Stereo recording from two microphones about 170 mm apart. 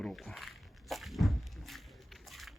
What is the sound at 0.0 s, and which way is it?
Walk, centre (ahead or behind).